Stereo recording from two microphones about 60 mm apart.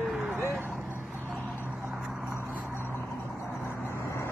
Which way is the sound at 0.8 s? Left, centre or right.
Right.